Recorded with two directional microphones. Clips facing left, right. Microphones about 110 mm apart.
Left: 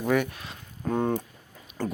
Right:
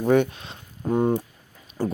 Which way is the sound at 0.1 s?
25° right (ahead or behind).